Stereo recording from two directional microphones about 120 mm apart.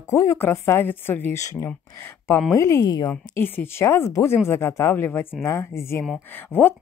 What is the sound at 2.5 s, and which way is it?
Speech, 25° left (ahead or behind).